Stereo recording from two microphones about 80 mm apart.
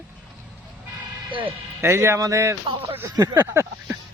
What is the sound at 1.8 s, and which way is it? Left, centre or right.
Speech, right.